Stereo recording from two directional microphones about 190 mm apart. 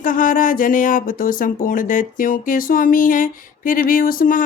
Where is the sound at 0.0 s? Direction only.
45° left (ahead or behind).